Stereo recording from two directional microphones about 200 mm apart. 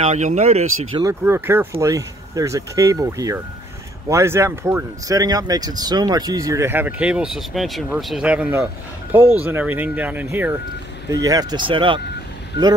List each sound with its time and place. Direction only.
0.0 s speech: 35° right (ahead or behind)
1.0 s speech: 10° right (ahead or behind)